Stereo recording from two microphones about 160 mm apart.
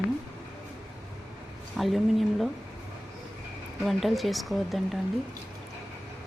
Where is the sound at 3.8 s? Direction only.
Centre (ahead or behind).